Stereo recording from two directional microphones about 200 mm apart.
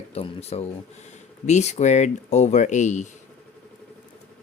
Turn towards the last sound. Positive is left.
turn(degrees=35)  # may be behind; listen again after turning